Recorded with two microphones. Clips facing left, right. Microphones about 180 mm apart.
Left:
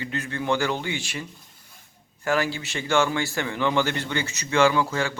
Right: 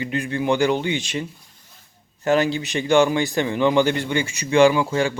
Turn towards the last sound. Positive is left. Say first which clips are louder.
# right 5 dB
turn(degrees=-15)  # may be behind; listen again after turning